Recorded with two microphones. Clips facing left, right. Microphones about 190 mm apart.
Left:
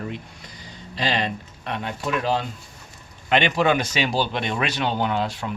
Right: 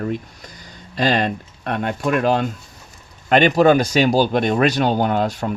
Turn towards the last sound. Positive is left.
turn(degrees=-45)  # may be behind; listen again after turning